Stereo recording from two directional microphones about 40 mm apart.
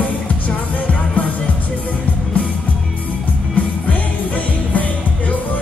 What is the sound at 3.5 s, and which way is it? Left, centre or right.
Music, left.